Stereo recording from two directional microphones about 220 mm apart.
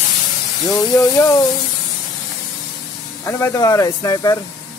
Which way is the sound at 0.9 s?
15° left (ahead or behind).